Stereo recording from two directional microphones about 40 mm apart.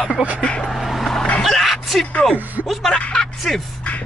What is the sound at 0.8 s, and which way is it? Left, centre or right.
Vehicle, centre.